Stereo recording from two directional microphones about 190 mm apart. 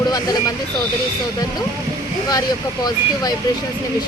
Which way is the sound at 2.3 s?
20° left (ahead or behind).